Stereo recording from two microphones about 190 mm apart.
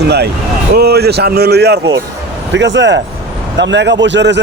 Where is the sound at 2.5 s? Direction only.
70° right (ahead or behind).